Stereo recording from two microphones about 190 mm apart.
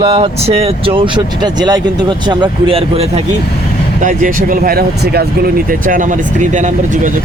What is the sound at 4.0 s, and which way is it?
Speech, 45° right (ahead or behind).